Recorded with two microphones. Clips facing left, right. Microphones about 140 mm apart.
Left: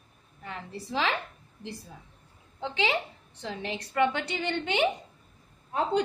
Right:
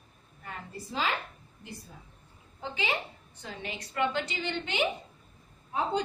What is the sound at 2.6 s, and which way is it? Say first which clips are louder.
Speech: left 4 dB; 90° left.